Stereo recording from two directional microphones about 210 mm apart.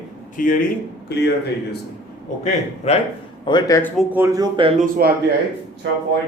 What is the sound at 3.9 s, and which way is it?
Speech, 10° right (ahead or behind).